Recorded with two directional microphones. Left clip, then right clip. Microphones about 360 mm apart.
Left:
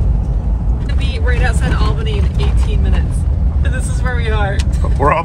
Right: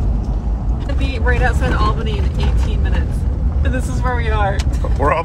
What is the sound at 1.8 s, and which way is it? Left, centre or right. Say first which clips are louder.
Speech: right 2 dB; right.